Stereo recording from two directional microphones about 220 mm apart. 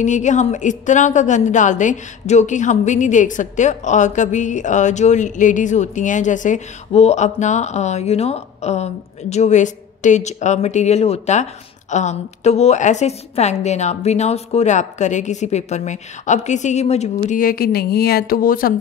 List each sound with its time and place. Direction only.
0.0 s a woman's voice: 35° left (ahead or behind)